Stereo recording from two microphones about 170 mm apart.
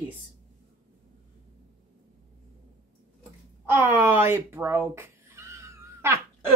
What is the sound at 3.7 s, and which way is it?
Speech, 15° right (ahead or behind).